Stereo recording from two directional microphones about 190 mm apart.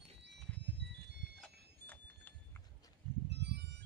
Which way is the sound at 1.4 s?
10° left (ahead or behind).